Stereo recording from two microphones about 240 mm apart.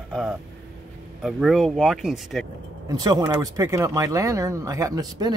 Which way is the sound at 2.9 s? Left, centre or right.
Centre.